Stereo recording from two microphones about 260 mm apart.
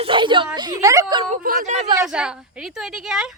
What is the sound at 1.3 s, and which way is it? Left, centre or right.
Speech, right.